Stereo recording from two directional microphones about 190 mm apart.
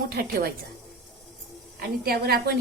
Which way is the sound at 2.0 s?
55° right (ahead or behind).